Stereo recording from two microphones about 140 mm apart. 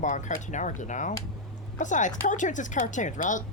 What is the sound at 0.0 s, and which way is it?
A woman's voice, 60° left (ahead or behind).